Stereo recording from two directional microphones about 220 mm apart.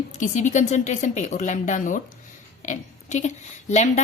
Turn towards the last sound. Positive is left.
turn(degrees=30)  # may be behind; listen again after turning